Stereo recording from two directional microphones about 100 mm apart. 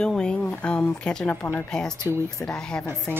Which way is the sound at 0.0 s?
10° left (ahead or behind).